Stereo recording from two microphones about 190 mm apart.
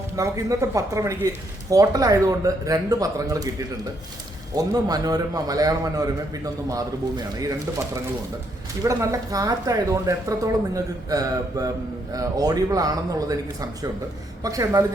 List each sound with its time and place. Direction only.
0.2 s speech: 15° right (ahead or behind)
4.5 s a man's voice: 20° right (ahead or behind)
8.8 s a man's voice: 15° right (ahead or behind)